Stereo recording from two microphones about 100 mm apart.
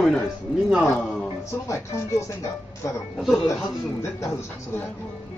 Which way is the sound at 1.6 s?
30° left (ahead or behind).